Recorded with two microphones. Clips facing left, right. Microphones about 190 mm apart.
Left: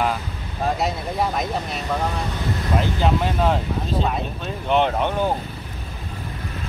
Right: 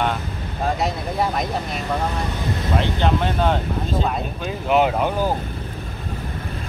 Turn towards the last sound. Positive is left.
turn(degrees=-5)  # may be behind; listen again after turning